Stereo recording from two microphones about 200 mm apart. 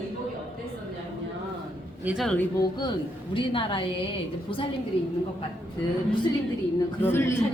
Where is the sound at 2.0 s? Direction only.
5° right (ahead or behind).